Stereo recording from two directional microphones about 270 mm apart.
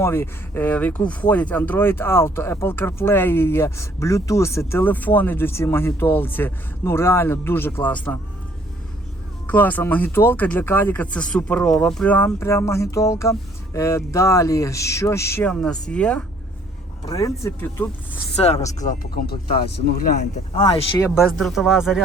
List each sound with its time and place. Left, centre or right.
0.0 s speech: centre
9.5 s speech: centre
18.4 s speech: left
21.2 s speech: centre